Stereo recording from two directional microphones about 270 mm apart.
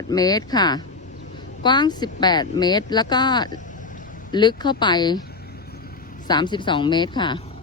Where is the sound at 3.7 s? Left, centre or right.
Left.